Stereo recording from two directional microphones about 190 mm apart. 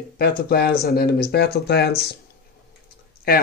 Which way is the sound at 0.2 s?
55° left (ahead or behind).